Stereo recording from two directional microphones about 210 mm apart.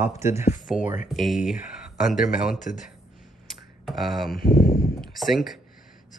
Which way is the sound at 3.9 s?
Centre (ahead or behind).